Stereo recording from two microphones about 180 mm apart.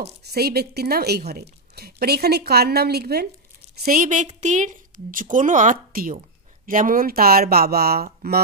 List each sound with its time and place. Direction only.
0.3 s a woman's voice: 60° right (ahead or behind)